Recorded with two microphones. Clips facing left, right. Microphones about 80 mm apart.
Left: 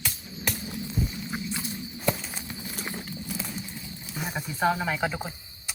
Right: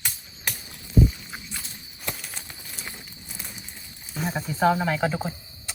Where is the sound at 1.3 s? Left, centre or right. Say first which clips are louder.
Left 7 dB; centre.